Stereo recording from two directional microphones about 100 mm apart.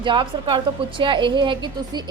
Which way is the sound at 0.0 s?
55° right (ahead or behind).